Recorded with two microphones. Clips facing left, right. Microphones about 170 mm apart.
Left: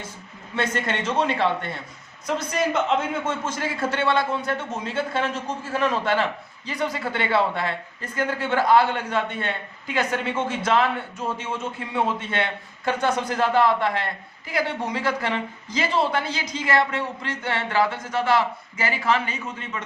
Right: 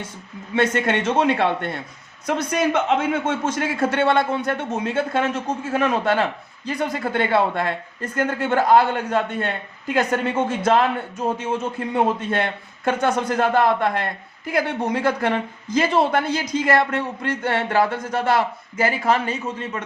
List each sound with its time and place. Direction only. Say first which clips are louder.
0.5 s a man's voice: right 6 dB; 60° right (ahead or behind); by 10.8 s 45° right (ahead or behind)
11.9 s a man's voice: right 3 dB; 40° right (ahead or behind)